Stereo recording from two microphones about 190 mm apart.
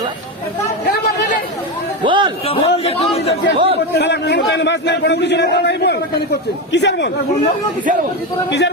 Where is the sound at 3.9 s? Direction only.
60° left (ahead or behind).